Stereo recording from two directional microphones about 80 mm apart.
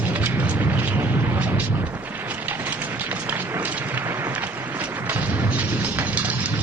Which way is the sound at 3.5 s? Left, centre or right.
Right.